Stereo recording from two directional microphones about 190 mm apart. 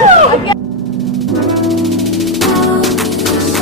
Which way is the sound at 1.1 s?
Centre (ahead or behind).